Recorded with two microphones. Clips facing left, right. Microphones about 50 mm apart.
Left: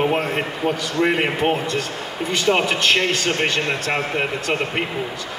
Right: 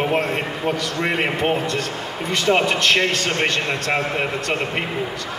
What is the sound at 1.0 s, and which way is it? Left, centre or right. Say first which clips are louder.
A man's voice: left 1 dB; centre.